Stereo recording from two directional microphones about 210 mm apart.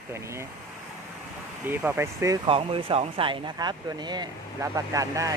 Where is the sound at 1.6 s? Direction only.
10° right (ahead or behind).